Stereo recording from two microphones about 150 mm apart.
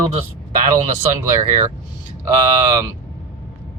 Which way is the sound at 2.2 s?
25° right (ahead or behind).